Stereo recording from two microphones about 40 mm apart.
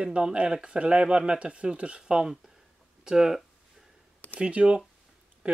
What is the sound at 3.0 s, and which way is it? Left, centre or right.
Speech, centre.